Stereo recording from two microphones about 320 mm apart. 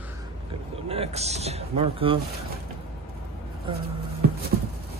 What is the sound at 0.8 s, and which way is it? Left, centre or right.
Speech, centre.